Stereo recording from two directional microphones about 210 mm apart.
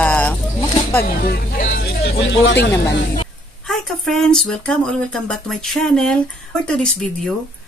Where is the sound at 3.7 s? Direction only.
Centre (ahead or behind).